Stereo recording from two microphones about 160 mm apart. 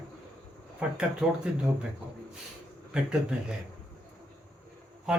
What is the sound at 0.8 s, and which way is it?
Speech, 5° right (ahead or behind).